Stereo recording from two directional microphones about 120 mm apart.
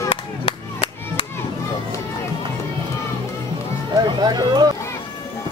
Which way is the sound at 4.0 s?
40° right (ahead or behind).